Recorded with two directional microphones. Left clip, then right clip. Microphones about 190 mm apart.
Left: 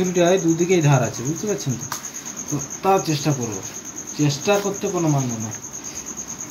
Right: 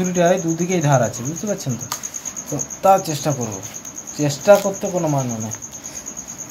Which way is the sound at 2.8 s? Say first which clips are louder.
Right 4 dB; 70° right (ahead or behind).